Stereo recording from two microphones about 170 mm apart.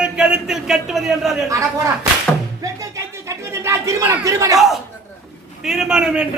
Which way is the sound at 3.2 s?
15° right (ahead or behind).